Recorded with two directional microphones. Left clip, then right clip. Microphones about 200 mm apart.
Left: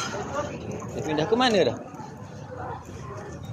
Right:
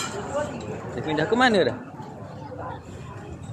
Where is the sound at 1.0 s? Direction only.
15° right (ahead or behind).